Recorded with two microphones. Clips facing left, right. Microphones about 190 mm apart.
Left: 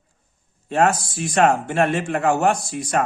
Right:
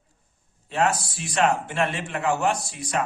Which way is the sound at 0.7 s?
45° left (ahead or behind).